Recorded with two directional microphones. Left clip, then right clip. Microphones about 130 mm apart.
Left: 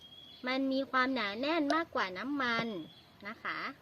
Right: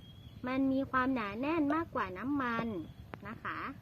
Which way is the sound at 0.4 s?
10° left (ahead or behind).